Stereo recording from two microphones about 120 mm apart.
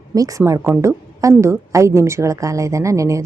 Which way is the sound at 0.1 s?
30° right (ahead or behind).